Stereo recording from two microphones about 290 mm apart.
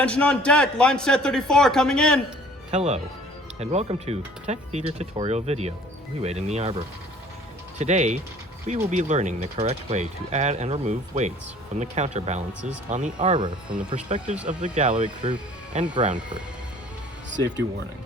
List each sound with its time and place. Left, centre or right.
0.0 s a man's voice: centre
2.7 s speech: right